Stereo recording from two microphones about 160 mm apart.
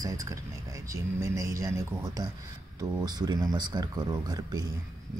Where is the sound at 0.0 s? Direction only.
20° right (ahead or behind).